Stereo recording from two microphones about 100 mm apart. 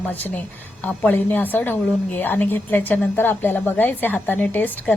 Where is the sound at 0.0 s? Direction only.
20° left (ahead or behind).